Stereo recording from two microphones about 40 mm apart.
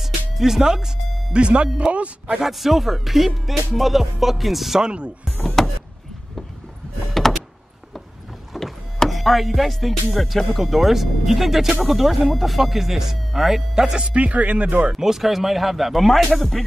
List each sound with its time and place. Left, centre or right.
0.0 s music: centre
1.3 s speech: right
2.4 s music: centre
4.8 s speech: right
5.6 s a sound: centre
7.2 s door: centre
8.5 s speech: centre
11.8 s music: centre
13.9 s speech: right
14.9 s music: centre